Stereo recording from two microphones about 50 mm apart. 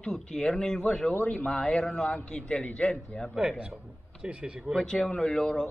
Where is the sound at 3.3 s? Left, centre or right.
Right.